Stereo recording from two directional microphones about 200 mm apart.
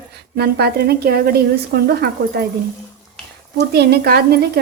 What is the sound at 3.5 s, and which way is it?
A woman's voice, 55° right (ahead or behind).